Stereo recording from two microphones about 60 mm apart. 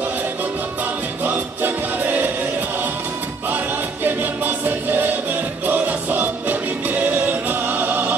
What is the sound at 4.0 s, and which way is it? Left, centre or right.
Music, right.